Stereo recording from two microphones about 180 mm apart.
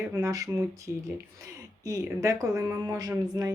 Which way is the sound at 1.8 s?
20° right (ahead or behind).